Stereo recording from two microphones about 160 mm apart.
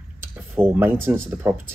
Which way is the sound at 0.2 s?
10° right (ahead or behind).